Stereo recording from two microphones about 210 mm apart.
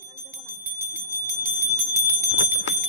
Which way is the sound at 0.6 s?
10° right (ahead or behind).